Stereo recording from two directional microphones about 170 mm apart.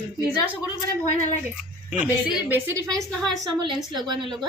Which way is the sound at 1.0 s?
45° left (ahead or behind).